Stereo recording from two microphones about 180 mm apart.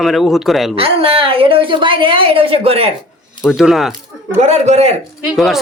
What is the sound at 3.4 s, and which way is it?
Speech, centre (ahead or behind).